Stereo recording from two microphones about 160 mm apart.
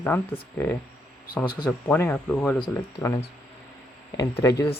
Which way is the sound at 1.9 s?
10° left (ahead or behind).